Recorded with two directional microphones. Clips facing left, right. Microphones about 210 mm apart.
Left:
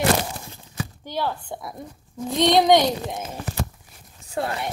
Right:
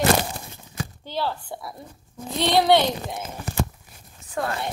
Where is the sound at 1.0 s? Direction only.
15° left (ahead or behind).